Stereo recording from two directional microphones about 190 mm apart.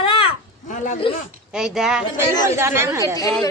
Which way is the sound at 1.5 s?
5° right (ahead or behind).